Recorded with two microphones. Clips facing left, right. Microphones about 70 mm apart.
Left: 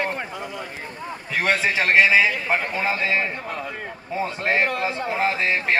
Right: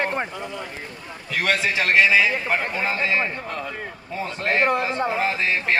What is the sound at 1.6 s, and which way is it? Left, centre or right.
Speech, left.